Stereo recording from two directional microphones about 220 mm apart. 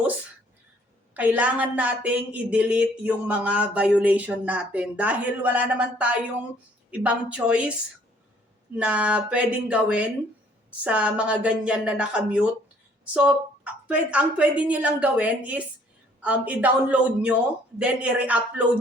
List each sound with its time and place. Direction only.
1.1 s a woman's voice: 5° right (ahead or behind)
8.7 s speech: 5° right (ahead or behind)
13.8 s a woman's voice: 5° right (ahead or behind)